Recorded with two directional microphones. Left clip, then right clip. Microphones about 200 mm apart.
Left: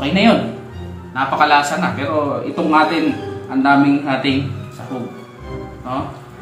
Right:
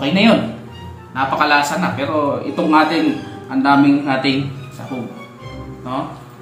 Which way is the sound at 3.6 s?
Centre (ahead or behind).